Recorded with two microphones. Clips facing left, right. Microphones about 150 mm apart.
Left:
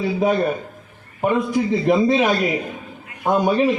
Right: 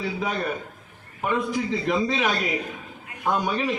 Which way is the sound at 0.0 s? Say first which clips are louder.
Left 9 dB; 45° left (ahead or behind).